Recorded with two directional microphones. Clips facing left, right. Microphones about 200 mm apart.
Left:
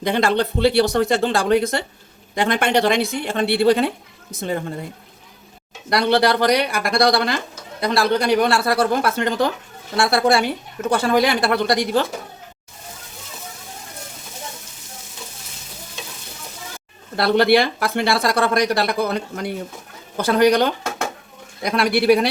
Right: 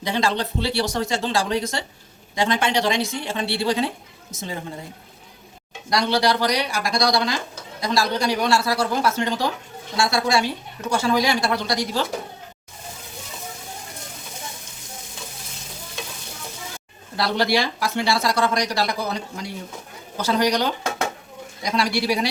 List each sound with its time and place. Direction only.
0.0 s speech: 55° left (ahead or behind)
5.9 s speech: 55° left (ahead or behind)
17.2 s speech: 60° left (ahead or behind)